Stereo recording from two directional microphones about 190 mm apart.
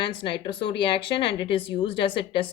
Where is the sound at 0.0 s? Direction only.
25° left (ahead or behind).